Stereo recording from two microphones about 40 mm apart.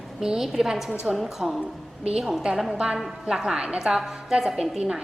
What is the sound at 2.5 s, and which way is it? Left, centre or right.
Speech, centre.